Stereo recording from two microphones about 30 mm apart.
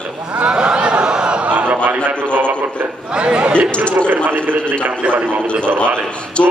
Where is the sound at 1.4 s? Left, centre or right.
Right.